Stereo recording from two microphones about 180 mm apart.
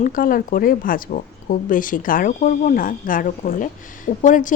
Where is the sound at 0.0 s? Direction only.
50° left (ahead or behind).